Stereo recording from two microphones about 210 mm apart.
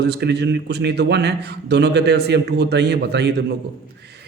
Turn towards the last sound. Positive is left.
turn(degrees=-50)  # may be behind; listen again after turning